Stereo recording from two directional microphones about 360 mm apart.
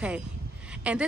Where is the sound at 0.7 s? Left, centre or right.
Centre.